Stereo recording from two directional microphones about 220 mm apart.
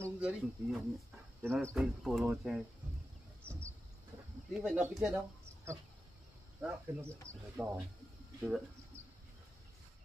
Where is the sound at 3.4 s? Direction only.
5° left (ahead or behind).